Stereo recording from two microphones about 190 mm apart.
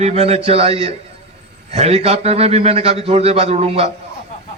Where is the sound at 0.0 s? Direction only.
35° right (ahead or behind).